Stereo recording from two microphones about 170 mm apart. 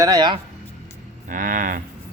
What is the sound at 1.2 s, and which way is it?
Cattle, 55° right (ahead or behind).